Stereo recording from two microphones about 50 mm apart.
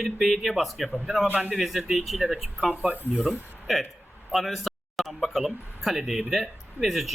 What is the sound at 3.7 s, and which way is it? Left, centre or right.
Speech, centre.